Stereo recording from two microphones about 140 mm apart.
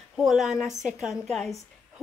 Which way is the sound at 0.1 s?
Centre (ahead or behind).